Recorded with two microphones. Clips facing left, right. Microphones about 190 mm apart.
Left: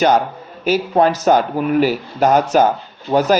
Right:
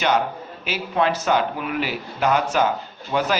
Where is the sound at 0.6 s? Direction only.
40° left (ahead or behind).